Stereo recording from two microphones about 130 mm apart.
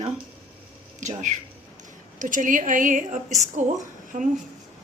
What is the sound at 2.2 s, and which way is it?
A woman's voice, 85° right.